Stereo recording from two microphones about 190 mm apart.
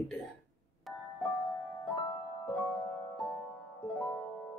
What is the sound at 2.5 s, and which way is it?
Music, 10° left (ahead or behind).